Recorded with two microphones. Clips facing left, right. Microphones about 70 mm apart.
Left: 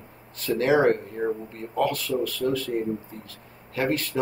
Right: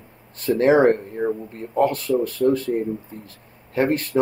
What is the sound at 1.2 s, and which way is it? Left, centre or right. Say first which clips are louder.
Speech: right 3 dB; centre.